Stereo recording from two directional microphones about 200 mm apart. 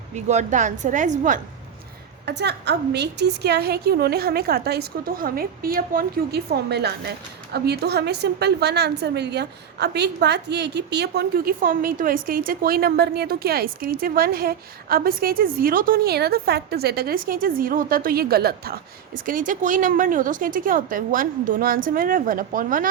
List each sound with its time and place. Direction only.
0.1 s a woman's voice: 35° right (ahead or behind)
2.2 s a woman's voice: 55° right (ahead or behind)